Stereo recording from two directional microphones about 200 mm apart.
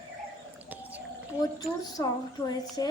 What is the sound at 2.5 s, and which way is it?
Speech, 20° left (ahead or behind).